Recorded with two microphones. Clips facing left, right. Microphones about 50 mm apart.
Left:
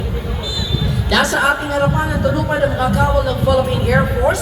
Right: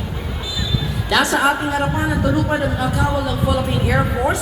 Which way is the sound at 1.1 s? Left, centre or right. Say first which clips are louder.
Left 1 dB; centre.